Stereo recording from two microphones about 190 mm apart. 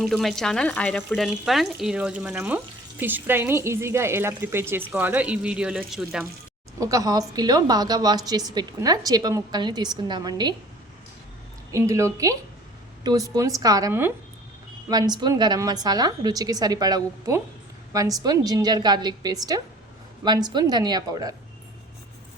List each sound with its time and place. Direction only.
0.0 s a woman's voice: centre (ahead or behind)
6.7 s a woman's voice: 15° right (ahead or behind)
11.7 s a woman's voice: 15° right (ahead or behind)